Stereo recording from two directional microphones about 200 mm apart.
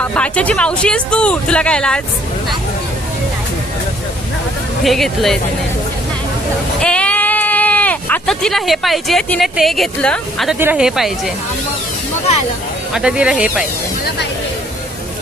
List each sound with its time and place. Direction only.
0.0 s speech: 5° left (ahead or behind)
4.8 s speech: centre (ahead or behind)
6.7 s speech: 5° left (ahead or behind)
12.9 s speech: 5° right (ahead or behind)